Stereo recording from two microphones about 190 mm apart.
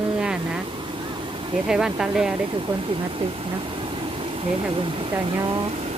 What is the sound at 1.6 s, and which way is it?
Speech, 5° right (ahead or behind).